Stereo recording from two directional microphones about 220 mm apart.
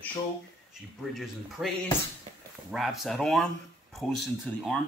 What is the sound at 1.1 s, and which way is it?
Speech, centre (ahead or behind).